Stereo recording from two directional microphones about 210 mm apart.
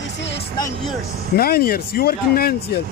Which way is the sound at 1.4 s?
45° left (ahead or behind).